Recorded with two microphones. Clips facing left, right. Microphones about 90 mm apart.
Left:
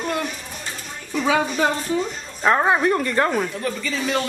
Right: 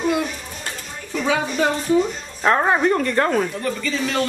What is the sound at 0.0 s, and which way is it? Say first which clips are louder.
Children playing: right 4 dB; 5° right (ahead or behind).